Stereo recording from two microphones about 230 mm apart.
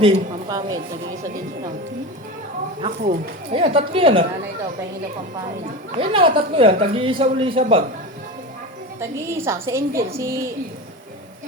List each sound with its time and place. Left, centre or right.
0.0 s a woman's voice: right
2.8 s speech: right
6.0 s speech: right
9.0 s a woman's voice: centre